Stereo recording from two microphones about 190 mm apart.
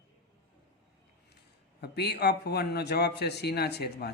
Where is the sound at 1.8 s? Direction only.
60° left (ahead or behind).